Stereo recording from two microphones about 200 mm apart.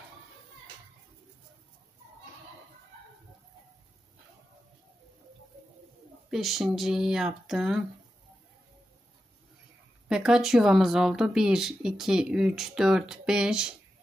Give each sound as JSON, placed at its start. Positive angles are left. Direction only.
{"t": 6.3, "sound": "speech", "side_deg": 0}
{"t": 10.0, "sound": "speech", "side_deg": -5}